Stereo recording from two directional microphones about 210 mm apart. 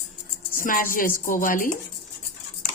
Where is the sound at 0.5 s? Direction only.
40° left (ahead or behind).